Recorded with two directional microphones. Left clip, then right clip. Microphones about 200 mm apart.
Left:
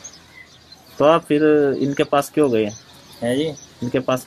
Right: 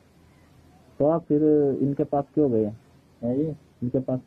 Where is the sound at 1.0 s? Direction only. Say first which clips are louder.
Left 7 dB; 15° left (ahead or behind).